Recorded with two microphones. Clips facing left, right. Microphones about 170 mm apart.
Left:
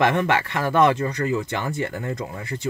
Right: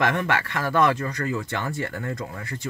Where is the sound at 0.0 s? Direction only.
25° left (ahead or behind).